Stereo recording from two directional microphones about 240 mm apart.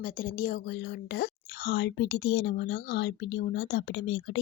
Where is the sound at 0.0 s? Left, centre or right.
Left.